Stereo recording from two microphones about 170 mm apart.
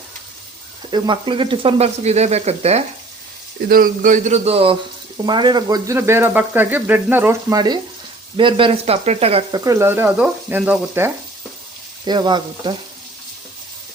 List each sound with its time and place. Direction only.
0.9 s speech: 25° right (ahead or behind)
3.7 s speech: 55° right (ahead or behind); by 7.3 s 10° right (ahead or behind)
7.5 s speech: 25° right (ahead or behind)
9.6 s speech: 15° right (ahead or behind)
12.0 s speech: 25° right (ahead or behind)